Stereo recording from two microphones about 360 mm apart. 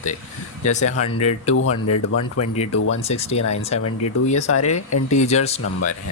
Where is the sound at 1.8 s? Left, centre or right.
Left.